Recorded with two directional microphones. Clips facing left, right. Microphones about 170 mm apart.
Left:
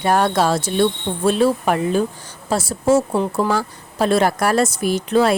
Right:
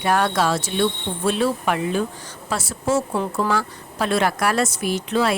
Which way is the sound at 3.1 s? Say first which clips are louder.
Left 4 dB; 20° left (ahead or behind).